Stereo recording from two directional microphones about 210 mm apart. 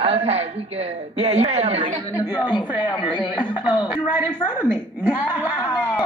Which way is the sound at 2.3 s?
20° left (ahead or behind).